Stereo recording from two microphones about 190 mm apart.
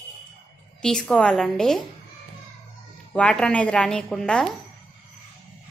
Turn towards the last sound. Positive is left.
turn(degrees=5)  # may be behind; listen again after turning